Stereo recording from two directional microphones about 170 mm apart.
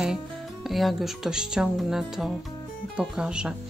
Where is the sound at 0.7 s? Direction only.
Centre (ahead or behind).